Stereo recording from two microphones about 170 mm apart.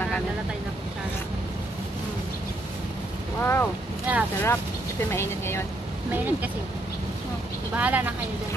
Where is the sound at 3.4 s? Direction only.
15° left (ahead or behind).